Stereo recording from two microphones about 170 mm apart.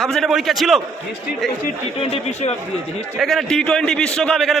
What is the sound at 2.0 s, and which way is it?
Speech, 35° left (ahead or behind).